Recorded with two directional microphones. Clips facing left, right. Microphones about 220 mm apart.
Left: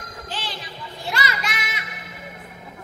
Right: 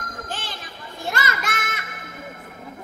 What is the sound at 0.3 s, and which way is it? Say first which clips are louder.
Music: left 1 dB; 50° right (ahead or behind).